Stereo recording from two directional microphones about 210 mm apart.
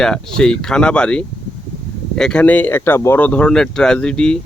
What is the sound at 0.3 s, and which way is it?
Speech, 5° left (ahead or behind).